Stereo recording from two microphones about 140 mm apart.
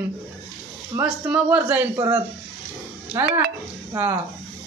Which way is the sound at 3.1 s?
15° right (ahead or behind).